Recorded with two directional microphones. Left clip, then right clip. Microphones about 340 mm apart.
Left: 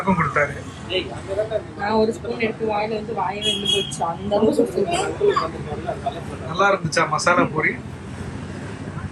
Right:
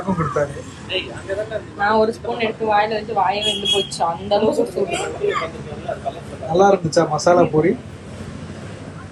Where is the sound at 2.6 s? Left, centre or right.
Centre.